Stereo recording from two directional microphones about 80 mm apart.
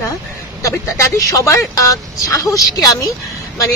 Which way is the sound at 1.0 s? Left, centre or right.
Left.